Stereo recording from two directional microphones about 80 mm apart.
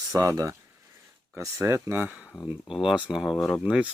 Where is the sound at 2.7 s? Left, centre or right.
Centre.